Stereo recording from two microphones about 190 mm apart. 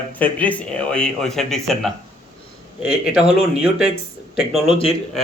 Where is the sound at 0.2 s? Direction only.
10° left (ahead or behind).